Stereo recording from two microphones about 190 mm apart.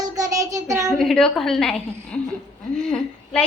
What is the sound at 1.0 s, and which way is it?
A woman's voice, centre (ahead or behind).